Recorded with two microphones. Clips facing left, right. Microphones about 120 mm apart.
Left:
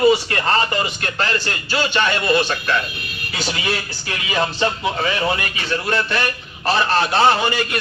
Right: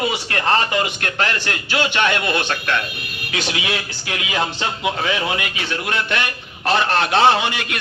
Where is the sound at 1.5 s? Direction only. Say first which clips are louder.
Even; 60° right (ahead or behind).